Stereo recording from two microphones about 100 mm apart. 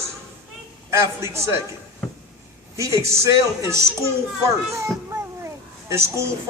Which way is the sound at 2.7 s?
30° right (ahead or behind).